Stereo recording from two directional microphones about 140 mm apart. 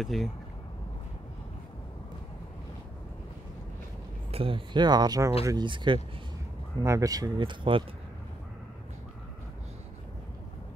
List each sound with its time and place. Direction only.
0.0 s speech: centre (ahead or behind)
4.3 s speech: 40° right (ahead or behind)
6.8 s speech: 25° right (ahead or behind)